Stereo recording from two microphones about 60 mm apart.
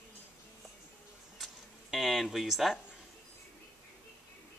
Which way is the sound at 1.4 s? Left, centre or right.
Centre.